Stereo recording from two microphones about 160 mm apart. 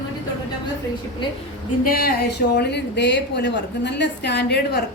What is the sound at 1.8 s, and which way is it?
A woman's voice, 70° left (ahead or behind).